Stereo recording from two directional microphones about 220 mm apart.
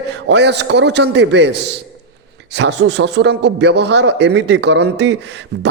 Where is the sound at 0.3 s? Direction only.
50° right (ahead or behind).